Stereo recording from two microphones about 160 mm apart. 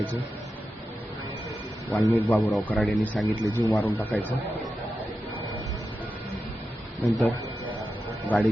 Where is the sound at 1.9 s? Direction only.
10° left (ahead or behind).